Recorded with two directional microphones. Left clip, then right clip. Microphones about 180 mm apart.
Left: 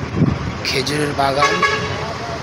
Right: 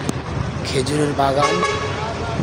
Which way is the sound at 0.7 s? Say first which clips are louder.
Left 1 dB; 15° right (ahead or behind).